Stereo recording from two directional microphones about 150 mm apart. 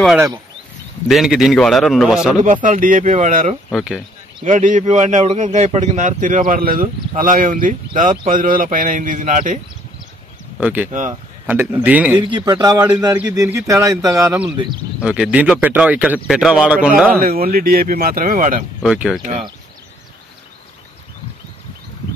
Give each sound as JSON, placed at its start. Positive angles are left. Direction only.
{"t": 1.0, "sound": "a man's voice", "side_deg": 0}
{"t": 2.4, "sound": "a man's voice", "side_deg": -60}
{"t": 3.7, "sound": "a man's voice", "side_deg": -5}
{"t": 4.5, "sound": "a man's voice", "side_deg": -55}
{"t": 10.6, "sound": "speech", "side_deg": -10}
{"t": 10.9, "sound": "a man's voice", "side_deg": -55}
{"t": 11.4, "sound": "speech", "side_deg": -15}
{"t": 12.2, "sound": "speech", "side_deg": -30}
{"t": 15.0, "sound": "speech", "side_deg": -5}
{"t": 17.2, "sound": "speech", "side_deg": -80}
{"t": 18.8, "sound": "a man's voice", "side_deg": 0}